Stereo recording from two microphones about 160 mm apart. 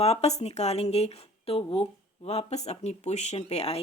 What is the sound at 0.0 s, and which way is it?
Speech, 40° left (ahead or behind).